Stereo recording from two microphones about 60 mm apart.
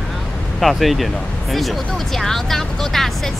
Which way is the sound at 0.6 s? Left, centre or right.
Centre.